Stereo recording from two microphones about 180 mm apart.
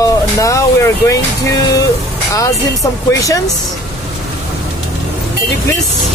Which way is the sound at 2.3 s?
20° left (ahead or behind).